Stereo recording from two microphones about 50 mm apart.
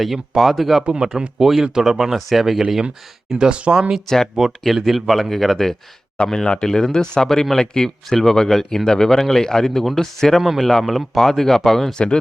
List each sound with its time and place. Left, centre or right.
0.0 s speech: centre
3.3 s speech: right
3.8 s speech: centre
4.0 s speech: centre
4.4 s speech: centre
10.4 s speech: centre
10.7 s speech: centre